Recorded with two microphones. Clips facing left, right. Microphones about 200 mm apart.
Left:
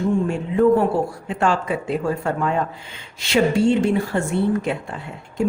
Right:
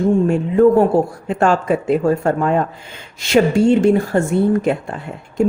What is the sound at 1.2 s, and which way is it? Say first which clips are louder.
A woman's voice: right 5 dB; 45° right (ahead or behind).